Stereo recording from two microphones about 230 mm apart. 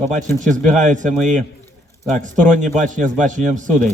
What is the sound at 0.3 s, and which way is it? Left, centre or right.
Speech, right.